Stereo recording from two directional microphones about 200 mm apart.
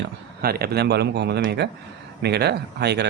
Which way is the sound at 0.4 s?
50° right (ahead or behind).